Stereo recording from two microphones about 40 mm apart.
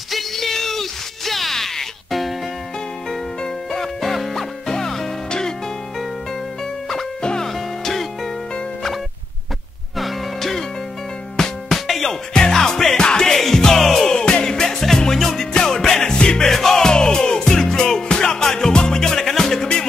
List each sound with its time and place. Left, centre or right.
0.1 s music: centre
3.7 s music: centre
7.2 s music: left
7.4 s music: centre
9.9 s music: centre
13.4 s music: centre
14.1 s music: centre